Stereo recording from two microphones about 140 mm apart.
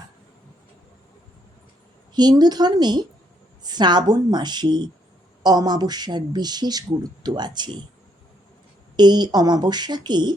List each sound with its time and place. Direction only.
2.1 s speech: 30° right (ahead or behind)
9.0 s speech: 30° right (ahead or behind)